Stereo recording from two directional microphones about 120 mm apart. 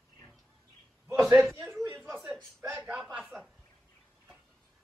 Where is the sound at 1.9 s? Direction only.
15° right (ahead or behind).